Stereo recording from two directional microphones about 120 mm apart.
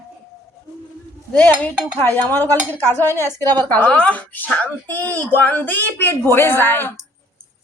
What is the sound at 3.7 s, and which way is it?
A woman's voice, 10° left (ahead or behind).